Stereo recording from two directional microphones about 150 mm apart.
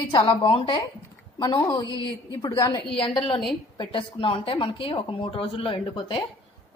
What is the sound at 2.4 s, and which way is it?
A man's voice, 25° left (ahead or behind).